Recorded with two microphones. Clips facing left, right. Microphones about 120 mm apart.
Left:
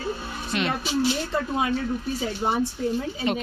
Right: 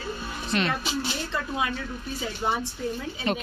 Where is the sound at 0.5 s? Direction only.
15° left (ahead or behind).